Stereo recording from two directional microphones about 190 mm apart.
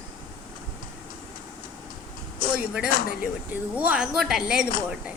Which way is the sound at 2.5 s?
5° right (ahead or behind).